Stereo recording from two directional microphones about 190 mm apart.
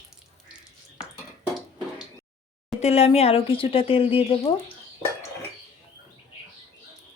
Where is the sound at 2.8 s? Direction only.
35° left (ahead or behind).